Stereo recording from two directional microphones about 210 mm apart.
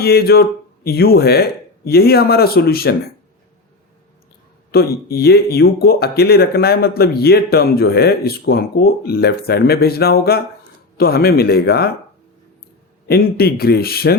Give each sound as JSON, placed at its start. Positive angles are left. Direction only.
{"t": 0.0, "sound": "speech", "side_deg": 45}
{"t": 4.7, "sound": "speech", "side_deg": 45}
{"t": 13.1, "sound": "speech", "side_deg": 45}